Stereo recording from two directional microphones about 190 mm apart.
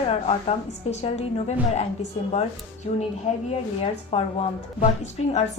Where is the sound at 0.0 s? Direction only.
30° left (ahead or behind).